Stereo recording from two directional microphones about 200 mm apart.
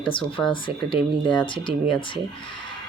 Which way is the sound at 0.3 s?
25° left (ahead or behind).